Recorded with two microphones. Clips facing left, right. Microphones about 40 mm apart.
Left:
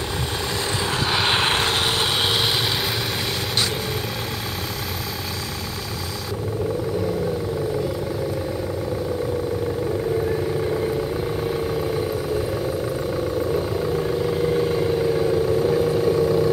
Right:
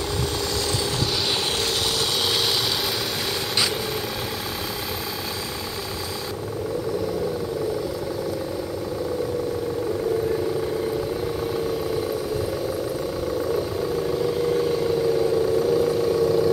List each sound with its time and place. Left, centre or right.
1.1 s vehicle: left
14.2 s vehicle: centre